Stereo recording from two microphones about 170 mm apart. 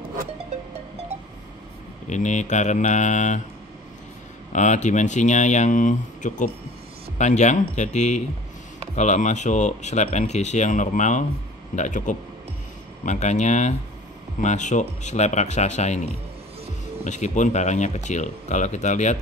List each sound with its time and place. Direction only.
2.0 s speech: 45° left (ahead or behind)
4.5 s speech: 45° left (ahead or behind)
17.0 s speech: 45° left (ahead or behind)